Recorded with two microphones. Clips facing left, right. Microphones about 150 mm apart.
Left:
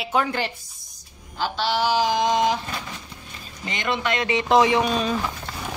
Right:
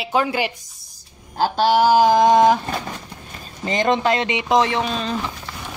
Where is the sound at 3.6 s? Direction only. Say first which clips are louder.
Right 7 dB; 40° right (ahead or behind).